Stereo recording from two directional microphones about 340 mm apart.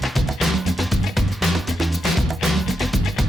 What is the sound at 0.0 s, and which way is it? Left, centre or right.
Music, centre.